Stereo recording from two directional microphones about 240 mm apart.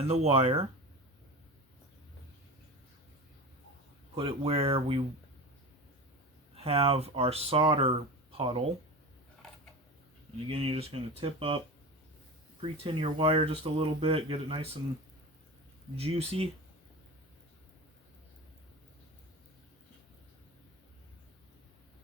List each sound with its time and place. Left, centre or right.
0.0 s speech: right
4.1 s speech: right
6.6 s speech: right
10.5 s speech: right
12.8 s speech: right
16.0 s speech: right